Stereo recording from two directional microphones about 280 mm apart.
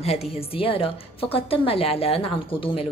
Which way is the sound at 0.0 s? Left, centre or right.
Left.